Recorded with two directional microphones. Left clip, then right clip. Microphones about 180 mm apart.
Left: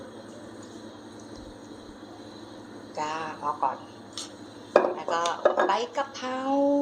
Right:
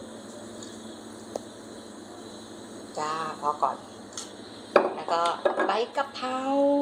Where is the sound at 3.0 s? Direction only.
15° right (ahead or behind).